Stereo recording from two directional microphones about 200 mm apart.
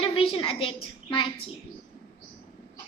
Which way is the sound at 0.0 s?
25° left (ahead or behind).